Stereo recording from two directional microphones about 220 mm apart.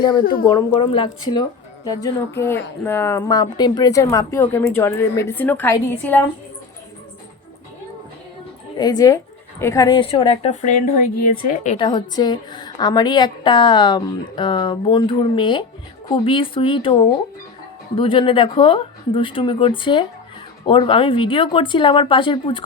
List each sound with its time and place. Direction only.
0.2 s a woman's voice: 40° left (ahead or behind)
0.5 s a woman's voice: 25° left (ahead or behind)
8.8 s a woman's voice: 15° left (ahead or behind)
11.8 s a woman's voice: 20° left (ahead or behind)